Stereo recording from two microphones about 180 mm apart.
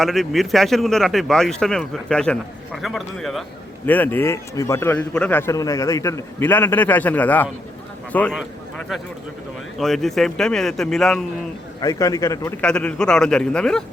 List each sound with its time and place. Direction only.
0.0 s a man's voice: centre (ahead or behind)
9.7 s speech: centre (ahead or behind)
11.8 s a man's voice: 20° left (ahead or behind)
12.6 s speech: 5° left (ahead or behind)